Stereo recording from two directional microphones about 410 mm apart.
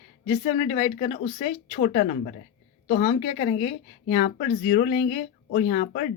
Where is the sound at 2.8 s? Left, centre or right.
Left.